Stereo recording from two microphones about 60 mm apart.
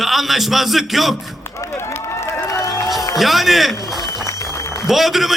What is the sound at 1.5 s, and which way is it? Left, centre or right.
Run, left.